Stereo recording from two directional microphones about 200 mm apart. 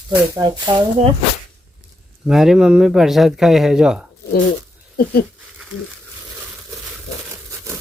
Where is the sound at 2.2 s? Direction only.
Centre (ahead or behind).